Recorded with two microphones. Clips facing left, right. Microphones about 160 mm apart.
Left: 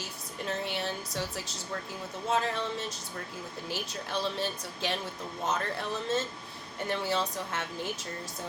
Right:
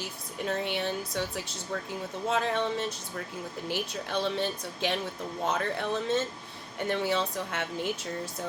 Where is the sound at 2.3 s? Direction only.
60° right (ahead or behind).